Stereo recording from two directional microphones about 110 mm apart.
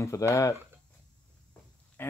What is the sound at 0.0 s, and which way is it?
Speech, 25° left (ahead or behind).